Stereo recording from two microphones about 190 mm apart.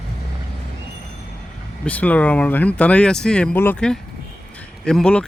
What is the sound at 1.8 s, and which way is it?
Speech, 10° left (ahead or behind).